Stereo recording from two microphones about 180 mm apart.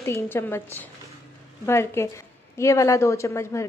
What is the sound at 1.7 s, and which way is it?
A woman's voice, 15° left (ahead or behind).